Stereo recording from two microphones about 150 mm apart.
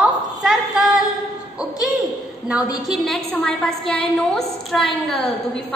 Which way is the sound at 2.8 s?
Centre (ahead or behind).